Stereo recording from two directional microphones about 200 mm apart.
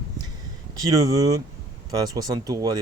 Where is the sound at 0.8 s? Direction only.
20° right (ahead or behind).